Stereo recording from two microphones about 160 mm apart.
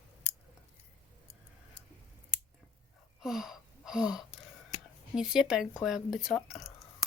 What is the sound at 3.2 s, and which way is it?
Gasp, 5° right (ahead or behind).